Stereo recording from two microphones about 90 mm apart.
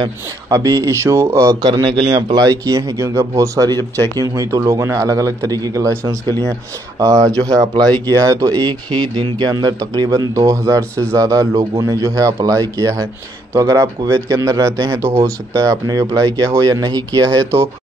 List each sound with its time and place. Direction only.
0.5 s speech: 40° right (ahead or behind)
3.7 s speech: 25° left (ahead or behind)
4.4 s speech: 35° right (ahead or behind)